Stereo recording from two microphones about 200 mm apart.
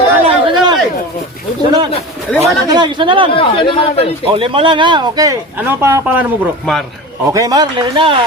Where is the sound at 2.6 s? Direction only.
20° right (ahead or behind).